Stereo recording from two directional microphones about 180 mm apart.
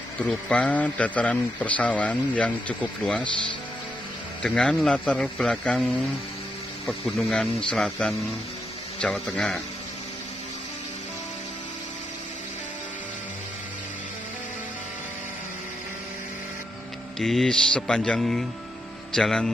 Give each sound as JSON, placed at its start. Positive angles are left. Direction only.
{"t": 0.3, "sound": "a man's voice", "side_deg": 5}
{"t": 4.4, "sound": "speech", "side_deg": 5}
{"t": 17.2, "sound": "speech", "side_deg": 0}